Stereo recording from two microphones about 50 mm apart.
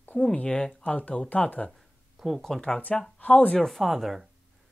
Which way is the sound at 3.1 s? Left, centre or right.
Left.